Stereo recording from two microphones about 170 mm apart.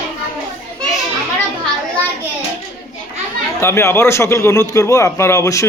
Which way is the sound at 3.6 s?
15° left (ahead or behind).